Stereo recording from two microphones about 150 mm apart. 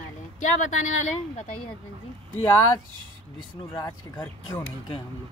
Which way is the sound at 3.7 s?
25° left (ahead or behind).